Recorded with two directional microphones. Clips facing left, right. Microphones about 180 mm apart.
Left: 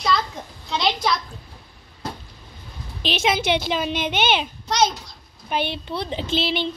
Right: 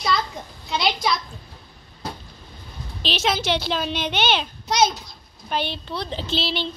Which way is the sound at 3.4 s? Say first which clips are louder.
Left 2 dB; 55° left (ahead or behind).